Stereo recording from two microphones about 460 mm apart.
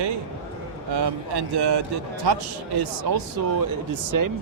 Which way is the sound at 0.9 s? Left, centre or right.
Right.